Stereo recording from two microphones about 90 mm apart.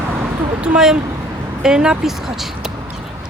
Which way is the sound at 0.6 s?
10° right (ahead or behind).